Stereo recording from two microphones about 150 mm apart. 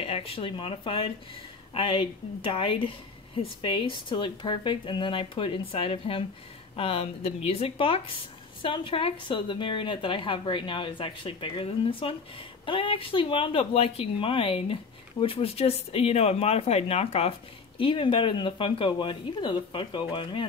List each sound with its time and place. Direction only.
0.0 s speech: 40° left (ahead or behind)